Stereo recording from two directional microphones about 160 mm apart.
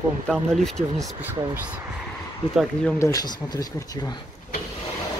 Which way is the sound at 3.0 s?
20° left (ahead or behind).